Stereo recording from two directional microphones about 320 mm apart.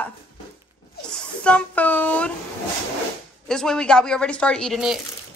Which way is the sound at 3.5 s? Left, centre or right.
Centre.